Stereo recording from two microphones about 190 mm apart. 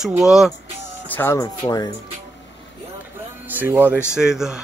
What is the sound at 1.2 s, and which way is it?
Speech, 15° left (ahead or behind).